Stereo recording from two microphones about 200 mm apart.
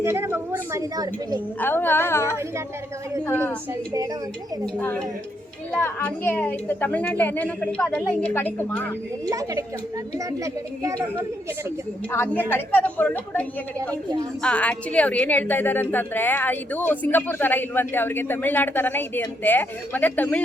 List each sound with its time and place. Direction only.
0.0 s a woman's voice: 10° right (ahead or behind)
1.5 s a woman's voice: 10° left (ahead or behind)
4.6 s a woman's voice: 5° left (ahead or behind)
9.3 s a woman's voice: 15° right (ahead or behind)
12.1 s a woman's voice: 10° left (ahead or behind)
13.9 s a woman's voice: 20° right (ahead or behind)
14.4 s a woman's voice: 5° left (ahead or behind)